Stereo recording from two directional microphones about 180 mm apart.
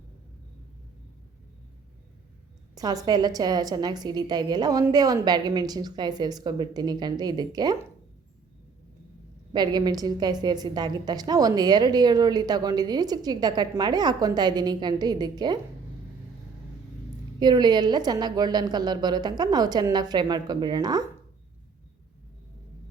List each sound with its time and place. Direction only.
2.7 s a woman's voice: 20° right (ahead or behind)
9.5 s a woman's voice: 25° right (ahead or behind)
17.4 s a woman's voice: 25° right (ahead or behind)